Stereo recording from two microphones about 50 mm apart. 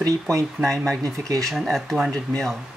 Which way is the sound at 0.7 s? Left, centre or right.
Centre.